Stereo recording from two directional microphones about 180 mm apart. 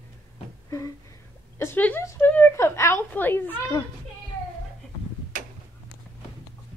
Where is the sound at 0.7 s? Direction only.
20° left (ahead or behind).